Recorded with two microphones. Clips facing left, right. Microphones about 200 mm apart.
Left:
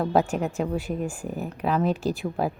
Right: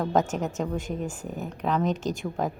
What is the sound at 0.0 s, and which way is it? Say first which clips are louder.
A woman's voice: left 2 dB; 10° left (ahead or behind).